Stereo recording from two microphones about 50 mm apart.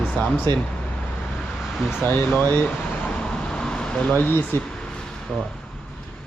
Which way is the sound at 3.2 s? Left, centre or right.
Centre.